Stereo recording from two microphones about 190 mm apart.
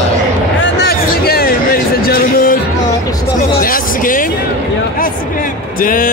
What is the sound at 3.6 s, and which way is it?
Music, 45° left (ahead or behind).